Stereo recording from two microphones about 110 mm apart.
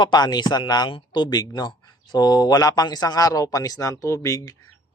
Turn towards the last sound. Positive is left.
turn(degrees=30)  # may be behind; listen again after turning